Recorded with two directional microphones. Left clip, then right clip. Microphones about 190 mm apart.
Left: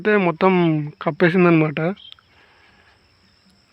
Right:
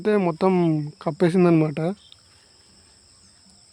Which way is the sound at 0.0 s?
10° right (ahead or behind).